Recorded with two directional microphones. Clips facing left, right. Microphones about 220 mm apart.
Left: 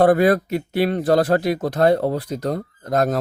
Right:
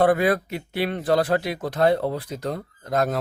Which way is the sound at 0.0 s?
40° left (ahead or behind).